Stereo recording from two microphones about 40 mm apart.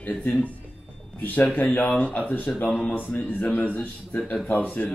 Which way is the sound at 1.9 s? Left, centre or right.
Left.